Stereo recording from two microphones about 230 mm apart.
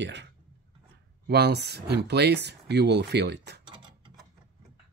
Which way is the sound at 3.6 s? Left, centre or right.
Right.